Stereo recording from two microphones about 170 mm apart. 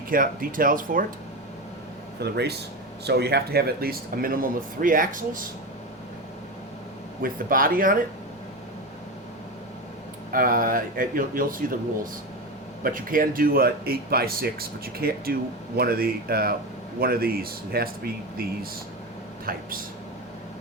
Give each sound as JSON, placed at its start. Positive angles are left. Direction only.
{"t": 0.1, "sound": "speech", "side_deg": -55}
{"t": 2.2, "sound": "speech", "side_deg": -75}
{"t": 7.2, "sound": "speech", "side_deg": -55}
{"t": 10.3, "sound": "speech", "side_deg": -55}
{"t": 12.8, "sound": "speech", "side_deg": -55}
{"t": 19.5, "sound": "speech", "side_deg": -60}